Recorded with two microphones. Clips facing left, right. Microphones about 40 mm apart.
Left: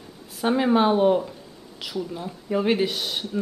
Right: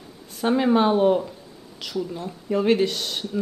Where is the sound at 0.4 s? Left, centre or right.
Centre.